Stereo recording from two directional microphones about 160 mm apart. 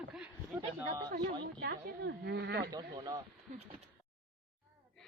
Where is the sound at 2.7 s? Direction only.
25° right (ahead or behind).